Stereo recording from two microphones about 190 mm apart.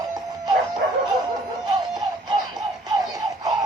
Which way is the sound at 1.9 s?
20° right (ahead or behind).